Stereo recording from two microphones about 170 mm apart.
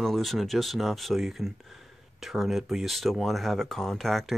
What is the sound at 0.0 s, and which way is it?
Speech, centre (ahead or behind).